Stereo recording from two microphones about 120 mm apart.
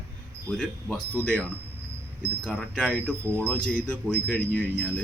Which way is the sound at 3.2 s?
20° right (ahead or behind).